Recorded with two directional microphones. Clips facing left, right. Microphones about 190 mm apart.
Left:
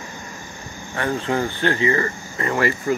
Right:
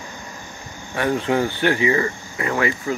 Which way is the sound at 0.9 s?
15° right (ahead or behind).